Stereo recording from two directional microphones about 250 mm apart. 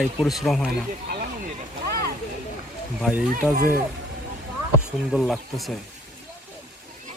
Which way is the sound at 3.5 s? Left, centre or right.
Right.